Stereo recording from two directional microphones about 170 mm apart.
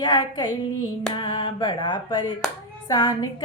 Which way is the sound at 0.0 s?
25° left (ahead or behind).